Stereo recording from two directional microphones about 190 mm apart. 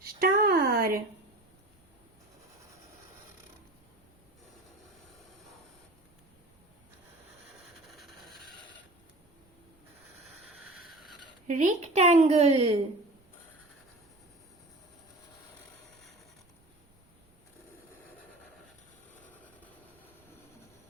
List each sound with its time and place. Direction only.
0.0 s a sound: 50° right (ahead or behind)
7.9 s vehicle: centre (ahead or behind)
11.4 s a woman's voice: 40° right (ahead or behind)